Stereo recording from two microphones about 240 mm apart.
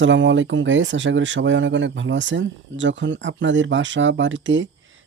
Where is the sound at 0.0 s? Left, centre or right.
Right.